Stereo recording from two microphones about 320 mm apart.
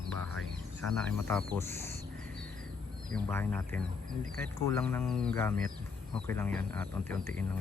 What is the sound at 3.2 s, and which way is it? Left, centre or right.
Speech, centre.